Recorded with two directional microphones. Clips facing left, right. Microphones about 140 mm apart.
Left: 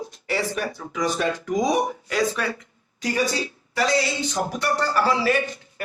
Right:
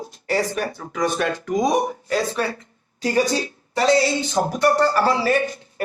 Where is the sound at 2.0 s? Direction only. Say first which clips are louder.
Right 2 dB; 35° right (ahead or behind).